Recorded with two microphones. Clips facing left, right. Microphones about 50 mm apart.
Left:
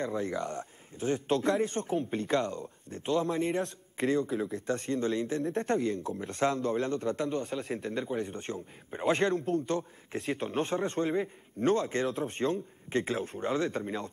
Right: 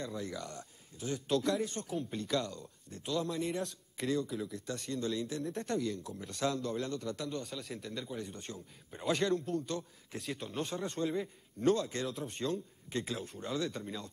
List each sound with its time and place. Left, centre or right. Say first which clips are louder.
0.0 s a man's voice: left 8 dB; left
4.4 s a man's voice: left 7 dB; left
4.6 s a man's voice: left 7 dB; left